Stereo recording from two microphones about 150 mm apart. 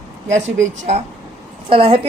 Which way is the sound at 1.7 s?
35° right (ahead or behind).